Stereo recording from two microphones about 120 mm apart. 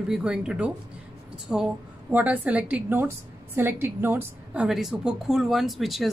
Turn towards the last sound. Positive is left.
turn(degrees=0)  # may be behind; listen again after turning